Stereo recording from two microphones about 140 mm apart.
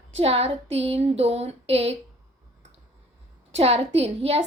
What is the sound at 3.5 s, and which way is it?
Speech, 45° right (ahead or behind).